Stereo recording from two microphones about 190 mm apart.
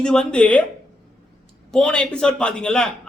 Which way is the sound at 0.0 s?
5° left (ahead or behind).